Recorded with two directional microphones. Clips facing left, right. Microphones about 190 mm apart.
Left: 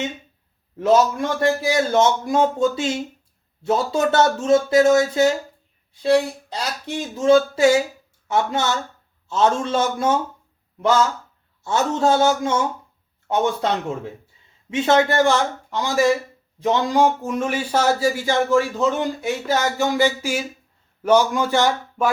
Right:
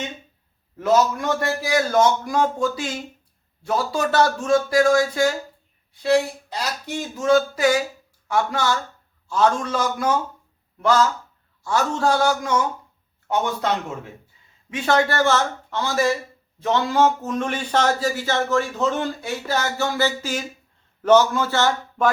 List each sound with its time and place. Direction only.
0.8 s a man's voice: 25° left (ahead or behind)
6.9 s a man's voice: 25° left (ahead or behind)